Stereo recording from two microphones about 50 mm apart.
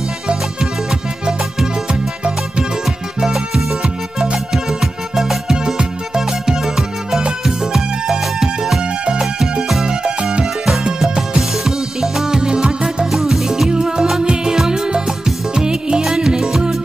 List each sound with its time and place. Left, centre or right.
0.8 s music: centre
7.7 s music: centre
9.8 s music: centre